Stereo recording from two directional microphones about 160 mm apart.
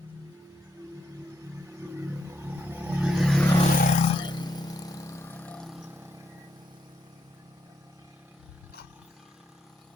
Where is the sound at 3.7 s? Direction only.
55° left (ahead or behind).